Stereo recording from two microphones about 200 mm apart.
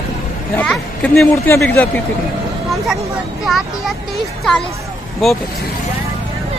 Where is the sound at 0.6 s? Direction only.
5° left (ahead or behind).